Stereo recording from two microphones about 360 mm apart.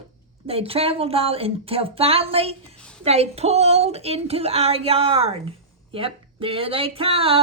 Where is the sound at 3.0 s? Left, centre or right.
Centre.